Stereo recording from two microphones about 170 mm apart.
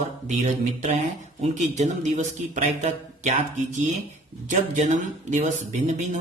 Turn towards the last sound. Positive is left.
turn(degrees=-45)  # may be behind; listen again after turning